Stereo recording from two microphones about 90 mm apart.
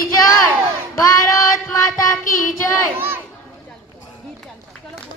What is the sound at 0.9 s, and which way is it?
A child's voice, 35° left (ahead or behind).